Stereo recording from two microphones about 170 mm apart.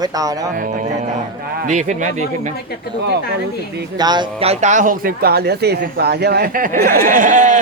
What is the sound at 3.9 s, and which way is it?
Speech, 25° right (ahead or behind).